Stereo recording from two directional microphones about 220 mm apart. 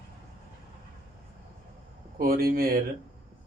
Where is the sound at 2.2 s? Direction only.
40° right (ahead or behind).